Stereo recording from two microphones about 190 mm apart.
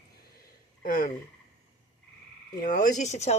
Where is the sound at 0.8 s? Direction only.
45° left (ahead or behind).